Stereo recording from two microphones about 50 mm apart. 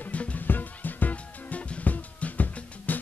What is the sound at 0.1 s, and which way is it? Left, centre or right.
Music, left.